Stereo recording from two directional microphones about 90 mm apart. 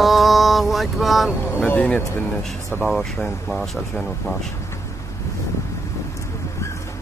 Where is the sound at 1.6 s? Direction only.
15° left (ahead or behind).